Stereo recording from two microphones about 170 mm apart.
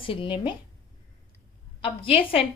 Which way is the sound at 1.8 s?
30° left (ahead or behind).